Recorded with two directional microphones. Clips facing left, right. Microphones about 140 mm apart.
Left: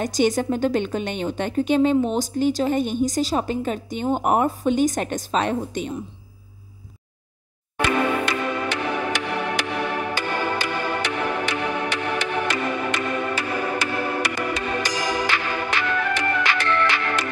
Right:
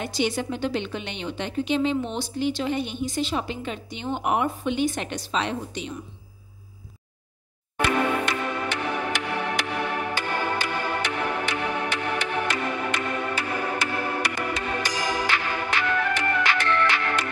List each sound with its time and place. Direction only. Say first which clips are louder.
0.0 s speech: left 6 dB; 45° left (ahead or behind)
7.7 s music: left 2 dB; 90° left